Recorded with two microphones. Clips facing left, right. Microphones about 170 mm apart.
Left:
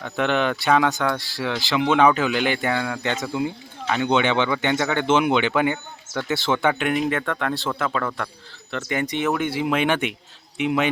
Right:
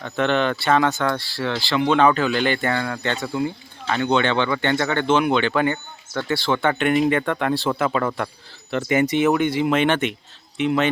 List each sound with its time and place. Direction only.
0.0 s speech: 10° left (ahead or behind)
6.7 s a man's voice: 5° left (ahead or behind)